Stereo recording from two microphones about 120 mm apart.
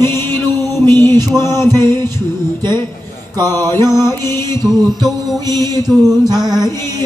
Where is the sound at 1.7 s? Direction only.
35° right (ahead or behind).